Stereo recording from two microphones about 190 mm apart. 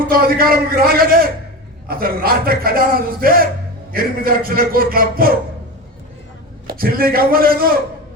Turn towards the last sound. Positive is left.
turn(degrees=-50)  # may be behind; listen again after turning